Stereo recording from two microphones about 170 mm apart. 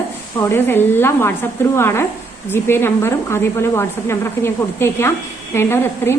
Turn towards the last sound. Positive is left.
turn(degrees=15)  # may be behind; listen again after turning